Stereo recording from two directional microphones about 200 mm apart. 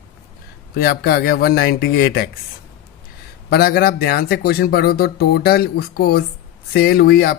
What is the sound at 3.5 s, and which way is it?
Speech, 50° left (ahead or behind).